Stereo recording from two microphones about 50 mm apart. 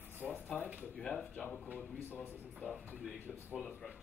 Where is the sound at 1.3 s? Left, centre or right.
Left.